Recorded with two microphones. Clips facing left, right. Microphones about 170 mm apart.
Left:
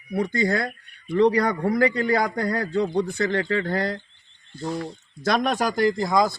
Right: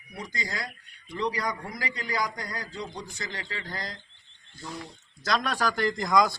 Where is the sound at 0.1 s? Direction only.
55° left (ahead or behind).